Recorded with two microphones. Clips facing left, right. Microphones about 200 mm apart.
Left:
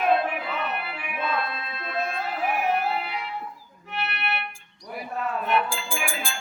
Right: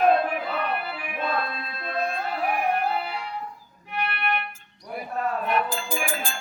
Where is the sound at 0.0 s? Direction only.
40° right (ahead or behind).